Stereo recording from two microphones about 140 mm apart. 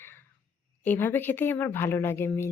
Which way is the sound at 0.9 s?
15° left (ahead or behind).